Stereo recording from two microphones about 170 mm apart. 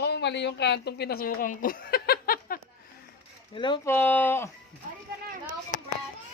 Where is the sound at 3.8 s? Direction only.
10° left (ahead or behind).